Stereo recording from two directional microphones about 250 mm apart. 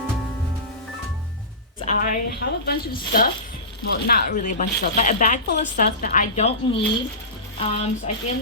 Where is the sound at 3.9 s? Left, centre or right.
Left.